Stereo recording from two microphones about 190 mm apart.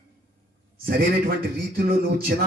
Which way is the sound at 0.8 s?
50° right (ahead or behind).